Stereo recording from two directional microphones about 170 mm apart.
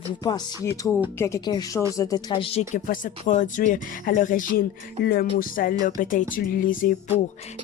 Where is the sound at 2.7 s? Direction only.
50° left (ahead or behind).